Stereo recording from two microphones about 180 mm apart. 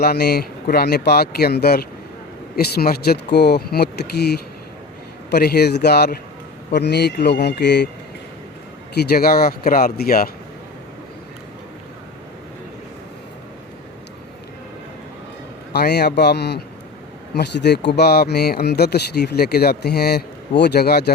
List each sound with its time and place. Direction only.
0.0 s speech: 60° left (ahead or behind)
9.0 s speech: 60° left (ahead or behind)
15.7 s speech: 65° left (ahead or behind)